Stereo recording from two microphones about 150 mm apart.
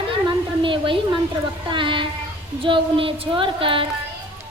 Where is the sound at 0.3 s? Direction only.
35° right (ahead or behind).